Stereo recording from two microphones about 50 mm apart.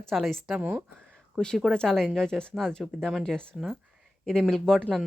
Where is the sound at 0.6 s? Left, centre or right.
Right.